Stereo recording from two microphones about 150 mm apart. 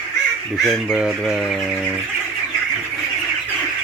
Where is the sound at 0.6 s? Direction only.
5° right (ahead or behind).